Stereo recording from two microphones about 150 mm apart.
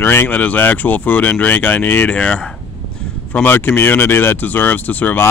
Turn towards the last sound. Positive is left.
turn(degrees=10)  # may be behind; listen again after turning